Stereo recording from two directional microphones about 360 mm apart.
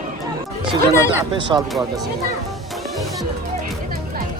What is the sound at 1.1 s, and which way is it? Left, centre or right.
Speech, centre.